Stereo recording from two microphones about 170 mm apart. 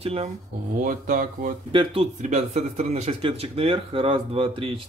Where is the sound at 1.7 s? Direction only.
30° right (ahead or behind).